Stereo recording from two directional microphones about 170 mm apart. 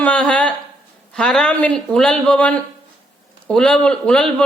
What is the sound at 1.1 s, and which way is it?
A man's voice, 5° left (ahead or behind).